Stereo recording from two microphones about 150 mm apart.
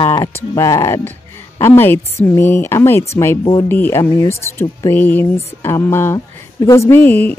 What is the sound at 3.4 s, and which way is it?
Speech, 35° left (ahead or behind).